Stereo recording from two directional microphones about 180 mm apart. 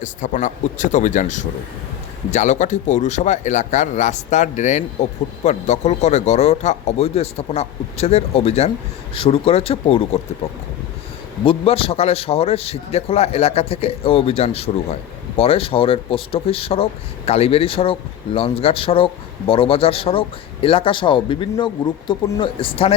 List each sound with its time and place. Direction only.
0.0 s speech: 45° left (ahead or behind)